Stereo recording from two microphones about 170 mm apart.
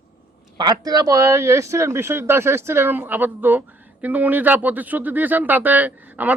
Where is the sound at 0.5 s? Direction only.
25° right (ahead or behind).